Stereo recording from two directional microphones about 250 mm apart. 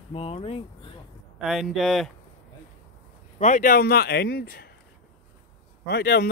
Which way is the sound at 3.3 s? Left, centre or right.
Left.